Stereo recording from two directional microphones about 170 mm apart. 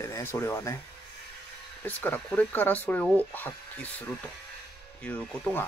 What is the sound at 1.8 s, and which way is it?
Speech, 10° left (ahead or behind).